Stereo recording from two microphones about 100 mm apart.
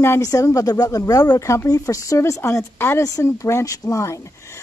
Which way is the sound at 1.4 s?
30° left (ahead or behind).